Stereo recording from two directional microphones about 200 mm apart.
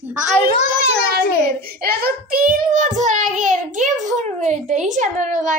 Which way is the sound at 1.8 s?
50° right (ahead or behind).